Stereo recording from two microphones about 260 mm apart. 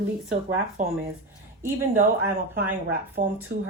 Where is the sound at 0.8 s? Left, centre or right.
Right.